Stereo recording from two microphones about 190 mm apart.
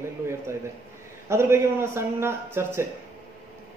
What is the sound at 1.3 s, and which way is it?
A man's voice, 15° right (ahead or behind).